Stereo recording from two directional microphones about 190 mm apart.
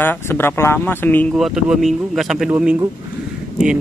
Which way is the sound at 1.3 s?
Centre (ahead or behind).